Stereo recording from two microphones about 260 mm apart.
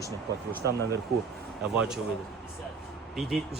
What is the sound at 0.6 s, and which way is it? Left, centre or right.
Speech, right.